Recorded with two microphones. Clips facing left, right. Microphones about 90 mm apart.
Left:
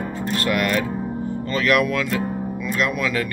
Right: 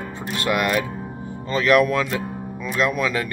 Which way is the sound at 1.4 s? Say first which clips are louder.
Right 3 dB; 25° right (ahead or behind).